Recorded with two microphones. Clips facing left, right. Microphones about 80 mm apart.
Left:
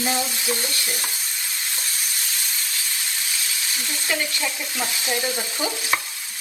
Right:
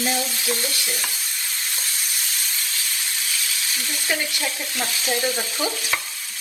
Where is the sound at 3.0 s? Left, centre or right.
Centre.